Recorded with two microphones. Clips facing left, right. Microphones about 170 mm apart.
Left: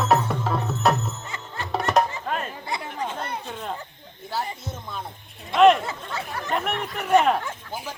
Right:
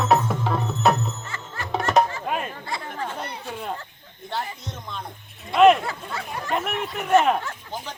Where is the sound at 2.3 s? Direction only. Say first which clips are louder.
Right 1 dB; 10° right (ahead or behind).